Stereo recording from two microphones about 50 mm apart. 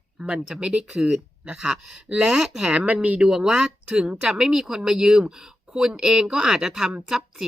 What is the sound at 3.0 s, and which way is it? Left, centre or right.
Speech, right.